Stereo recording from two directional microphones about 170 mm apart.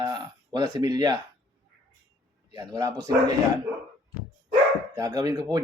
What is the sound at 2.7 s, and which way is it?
Speech, 20° right (ahead or behind).